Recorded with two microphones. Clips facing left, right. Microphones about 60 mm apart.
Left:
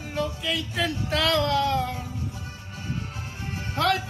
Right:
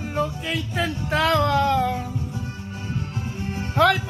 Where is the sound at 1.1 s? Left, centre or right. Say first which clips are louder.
Right 4 dB; right.